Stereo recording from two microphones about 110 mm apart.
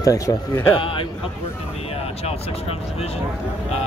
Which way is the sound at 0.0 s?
30° left (ahead or behind).